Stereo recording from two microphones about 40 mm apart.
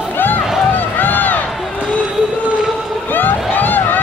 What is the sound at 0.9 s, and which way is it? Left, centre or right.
Crowd, left.